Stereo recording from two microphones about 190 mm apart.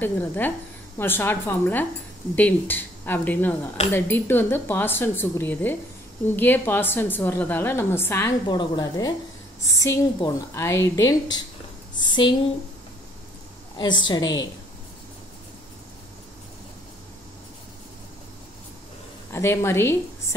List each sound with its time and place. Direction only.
0.0 s a woman's voice: 10° left (ahead or behind)
8.5 s a woman's voice: 25° left (ahead or behind)
13.7 s a woman's voice: 25° left (ahead or behind)
19.3 s a woman's voice: 15° left (ahead or behind)